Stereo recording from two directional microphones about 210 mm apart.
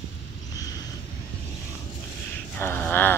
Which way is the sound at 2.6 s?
10° left (ahead or behind).